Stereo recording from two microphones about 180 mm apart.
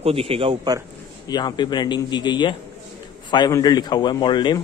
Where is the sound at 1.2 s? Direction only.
25° left (ahead or behind).